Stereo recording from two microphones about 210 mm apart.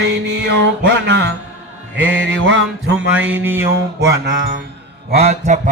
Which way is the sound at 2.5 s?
60° right (ahead or behind).